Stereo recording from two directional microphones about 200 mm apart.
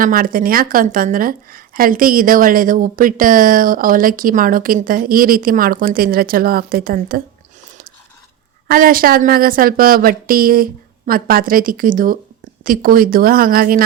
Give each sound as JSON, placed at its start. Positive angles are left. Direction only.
{"t": 0.0, "sound": "a woman's voice", "side_deg": -45}
{"t": 8.6, "sound": "a woman's voice", "side_deg": -45}